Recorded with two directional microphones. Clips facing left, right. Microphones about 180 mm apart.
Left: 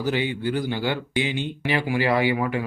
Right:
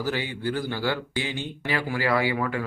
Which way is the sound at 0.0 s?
20° left (ahead or behind).